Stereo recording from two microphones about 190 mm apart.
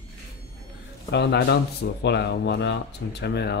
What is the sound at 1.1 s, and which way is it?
Speech, 60° left (ahead or behind).